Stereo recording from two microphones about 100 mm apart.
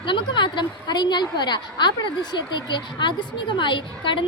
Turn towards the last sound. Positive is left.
turn(degrees=55)  # may be behind; listen again after turning